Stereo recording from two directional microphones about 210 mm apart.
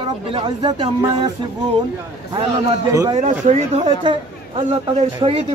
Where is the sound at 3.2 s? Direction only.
35° right (ahead or behind).